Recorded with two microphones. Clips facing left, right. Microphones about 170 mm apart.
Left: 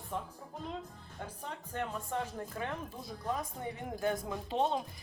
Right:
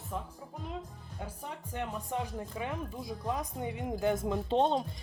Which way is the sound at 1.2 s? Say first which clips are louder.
Right 1 dB; 10° right (ahead or behind).